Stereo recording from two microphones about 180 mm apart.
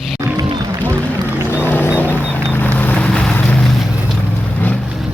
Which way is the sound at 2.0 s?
10° left (ahead or behind).